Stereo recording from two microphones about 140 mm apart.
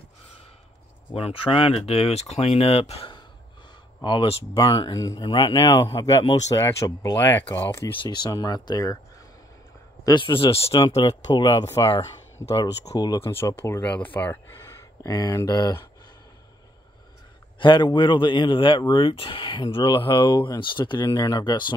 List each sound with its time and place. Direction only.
1.1 s speech: 40° left (ahead or behind); by 7.2 s 25° left (ahead or behind)
7.5 s speech: 15° left (ahead or behind)
8.0 s speech: 30° left (ahead or behind)
10.0 s speech: 35° left (ahead or behind)
11.1 s speech: 30° left (ahead or behind)
17.6 s speech: 35° left (ahead or behind)